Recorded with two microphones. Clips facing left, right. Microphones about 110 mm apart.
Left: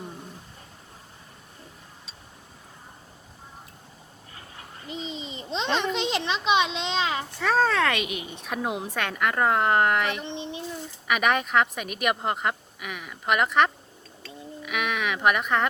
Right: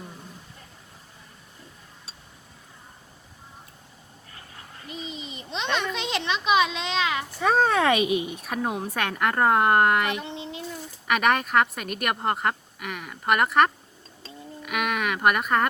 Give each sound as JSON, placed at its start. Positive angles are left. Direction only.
{"t": 4.9, "sound": "a child's voice", "side_deg": 25}
{"t": 7.3, "sound": "speech", "side_deg": -20}
{"t": 8.3, "sound": "a woman's voice", "side_deg": -5}
{"t": 10.2, "sound": "a child's voice", "side_deg": 25}
{"t": 11.1, "sound": "a woman's voice", "side_deg": 5}
{"t": 14.6, "sound": "a sound", "side_deg": 0}